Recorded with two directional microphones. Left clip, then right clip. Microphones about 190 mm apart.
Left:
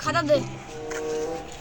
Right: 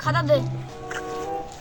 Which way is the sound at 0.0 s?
Centre (ahead or behind).